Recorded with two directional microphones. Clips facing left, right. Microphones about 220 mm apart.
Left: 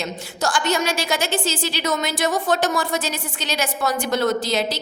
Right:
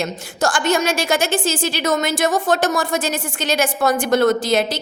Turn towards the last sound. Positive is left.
turn(degrees=-50)  # may be behind; listen again after turning